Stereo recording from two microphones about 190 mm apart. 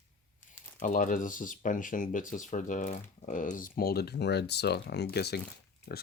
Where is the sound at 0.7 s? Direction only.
45° left (ahead or behind).